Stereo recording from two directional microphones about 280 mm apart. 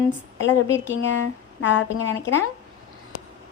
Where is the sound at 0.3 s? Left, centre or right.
Left.